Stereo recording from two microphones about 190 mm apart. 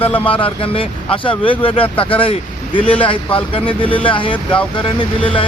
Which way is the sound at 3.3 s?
25° left (ahead or behind).